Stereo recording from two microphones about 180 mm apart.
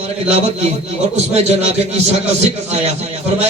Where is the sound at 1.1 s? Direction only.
35° right (ahead or behind).